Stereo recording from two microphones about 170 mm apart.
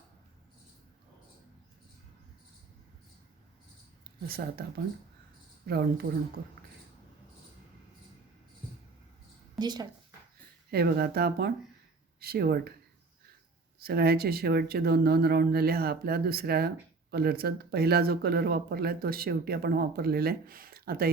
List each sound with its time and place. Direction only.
4.0 s speech: 65° right (ahead or behind)
5.6 s speech: 65° right (ahead or behind)
9.6 s speech: 25° right (ahead or behind)
10.7 s speech: 70° right (ahead or behind)
13.7 s speech: 65° right (ahead or behind)